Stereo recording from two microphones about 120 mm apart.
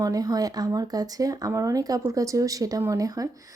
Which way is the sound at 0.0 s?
30° right (ahead or behind).